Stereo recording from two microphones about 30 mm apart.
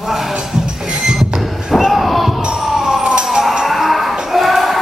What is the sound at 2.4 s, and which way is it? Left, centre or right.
Music, right.